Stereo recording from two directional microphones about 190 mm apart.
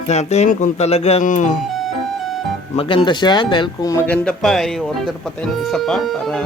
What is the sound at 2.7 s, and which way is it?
Speech, 30° left (ahead or behind).